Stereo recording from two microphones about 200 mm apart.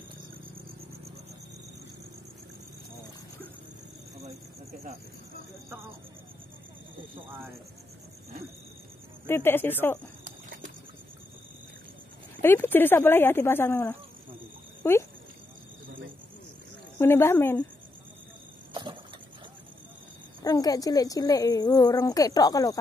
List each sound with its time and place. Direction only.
9.2 s a woman's voice: 10° left (ahead or behind)
12.4 s a woman's voice: 10° left (ahead or behind)
17.0 s a woman's voice: 10° left (ahead or behind)
18.7 s a sound: 25° right (ahead or behind)
20.4 s a woman's voice: 20° left (ahead or behind)